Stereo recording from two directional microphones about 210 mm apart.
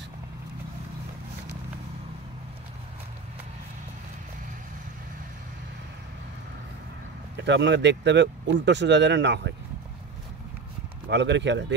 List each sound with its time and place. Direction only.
7.3 s speech: 60° right (ahead or behind)
11.1 s speech: 55° right (ahead or behind)